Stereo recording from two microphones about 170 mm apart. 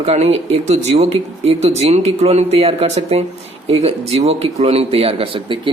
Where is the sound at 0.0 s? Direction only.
40° right (ahead or behind).